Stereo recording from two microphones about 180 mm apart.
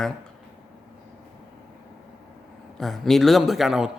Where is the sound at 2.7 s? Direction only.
Centre (ahead or behind).